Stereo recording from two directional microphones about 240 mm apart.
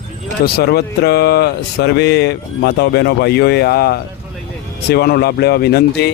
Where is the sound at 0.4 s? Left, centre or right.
Left.